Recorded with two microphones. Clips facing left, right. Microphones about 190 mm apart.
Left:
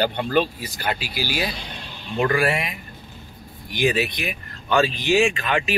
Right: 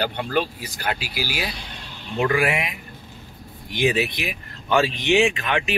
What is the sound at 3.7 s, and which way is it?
Speech, 25° right (ahead or behind).